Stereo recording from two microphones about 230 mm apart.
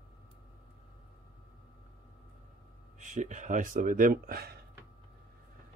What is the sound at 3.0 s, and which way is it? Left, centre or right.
Speech, right.